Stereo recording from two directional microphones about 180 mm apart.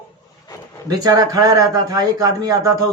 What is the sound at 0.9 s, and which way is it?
A man's voice, 20° right (ahead or behind).